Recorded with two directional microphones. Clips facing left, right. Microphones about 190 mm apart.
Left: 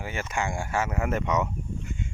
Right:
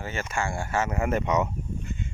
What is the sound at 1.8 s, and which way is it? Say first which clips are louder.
Duck: even; 10° left (ahead or behind).